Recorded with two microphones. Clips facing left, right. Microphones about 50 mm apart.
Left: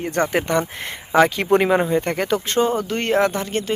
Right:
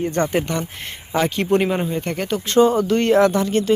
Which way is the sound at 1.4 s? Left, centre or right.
Left.